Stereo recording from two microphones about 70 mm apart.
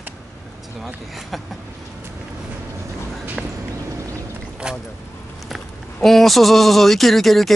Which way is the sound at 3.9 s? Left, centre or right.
Right.